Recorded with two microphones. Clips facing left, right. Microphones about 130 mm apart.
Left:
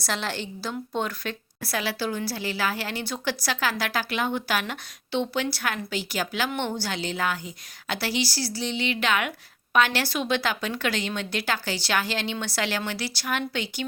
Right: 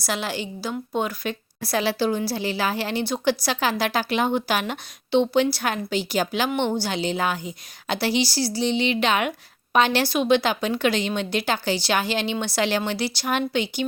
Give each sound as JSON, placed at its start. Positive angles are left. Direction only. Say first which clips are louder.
{"t": 0.0, "sound": "a woman's voice", "louder": "right 3 dB", "side_deg": -10}
{"t": 1.6, "sound": "a woman's voice", "louder": "right 6 dB", "side_deg": -25}